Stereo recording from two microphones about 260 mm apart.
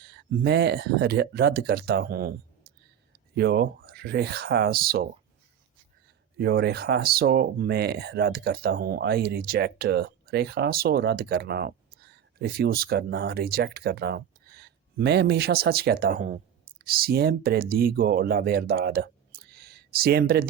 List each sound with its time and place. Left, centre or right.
0.0 s speech: right
3.3 s speech: right
6.3 s speech: right